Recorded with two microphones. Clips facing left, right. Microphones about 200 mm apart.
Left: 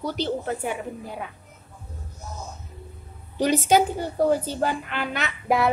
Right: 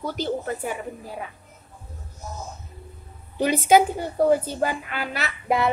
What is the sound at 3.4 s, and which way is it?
Speech, 10° right (ahead or behind).